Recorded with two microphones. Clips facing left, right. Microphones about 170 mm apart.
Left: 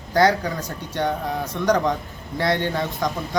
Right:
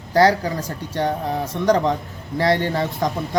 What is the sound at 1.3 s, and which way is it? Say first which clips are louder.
A man's voice: right 4 dB; 30° right (ahead or behind).